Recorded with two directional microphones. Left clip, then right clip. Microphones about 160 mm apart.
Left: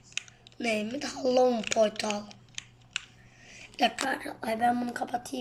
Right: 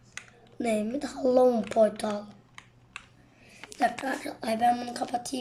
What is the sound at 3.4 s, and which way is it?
Speech, 10° right (ahead or behind).